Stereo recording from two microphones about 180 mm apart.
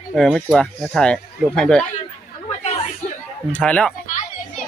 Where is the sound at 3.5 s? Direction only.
5° left (ahead or behind).